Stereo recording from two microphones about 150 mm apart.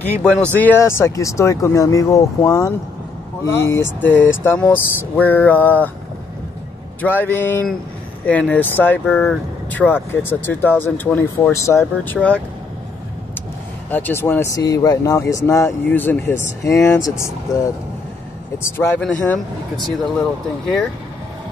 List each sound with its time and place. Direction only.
0.0 s speech: 5° left (ahead or behind)
7.0 s speech: 10° left (ahead or behind)
13.8 s speech: 15° left (ahead or behind)
18.6 s speech: 15° left (ahead or behind)